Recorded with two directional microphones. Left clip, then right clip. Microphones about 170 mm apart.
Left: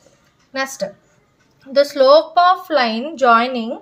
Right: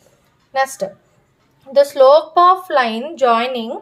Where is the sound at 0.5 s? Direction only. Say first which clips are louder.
Right 4 dB; 30° right (ahead or behind).